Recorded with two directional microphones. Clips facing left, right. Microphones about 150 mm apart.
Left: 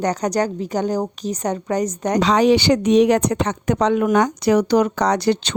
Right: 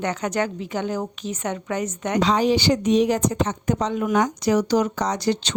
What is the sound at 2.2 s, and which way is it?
Speech, 75° left (ahead or behind).